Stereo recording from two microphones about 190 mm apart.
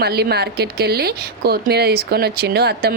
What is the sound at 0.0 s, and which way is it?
Speech, 55° right (ahead or behind).